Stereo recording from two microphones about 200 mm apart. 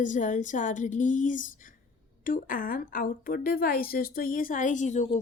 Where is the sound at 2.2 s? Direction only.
45° left (ahead or behind).